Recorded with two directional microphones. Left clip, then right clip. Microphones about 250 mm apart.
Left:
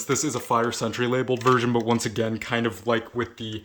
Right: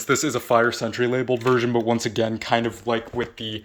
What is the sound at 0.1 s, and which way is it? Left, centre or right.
Speech, centre.